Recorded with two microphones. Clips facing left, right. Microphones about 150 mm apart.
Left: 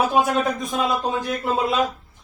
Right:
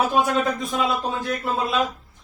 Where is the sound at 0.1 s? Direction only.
15° left (ahead or behind).